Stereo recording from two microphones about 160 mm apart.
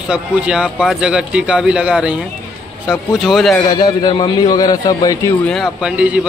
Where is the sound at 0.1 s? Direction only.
5° right (ahead or behind).